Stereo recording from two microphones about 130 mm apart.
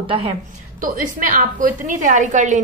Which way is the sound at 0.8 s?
90° right.